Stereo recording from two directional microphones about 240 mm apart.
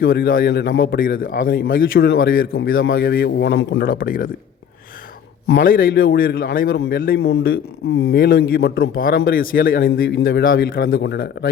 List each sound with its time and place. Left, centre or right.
0.0 s a man's voice: left
3.8 s a man's voice: left
5.5 s a man's voice: left